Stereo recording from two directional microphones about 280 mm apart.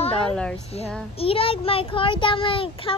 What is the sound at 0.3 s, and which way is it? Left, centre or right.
Speech, centre.